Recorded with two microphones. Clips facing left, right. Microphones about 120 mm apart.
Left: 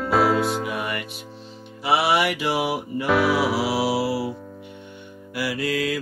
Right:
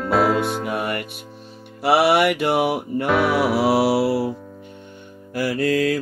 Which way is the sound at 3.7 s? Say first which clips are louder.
Right 5 dB; 60° right (ahead or behind).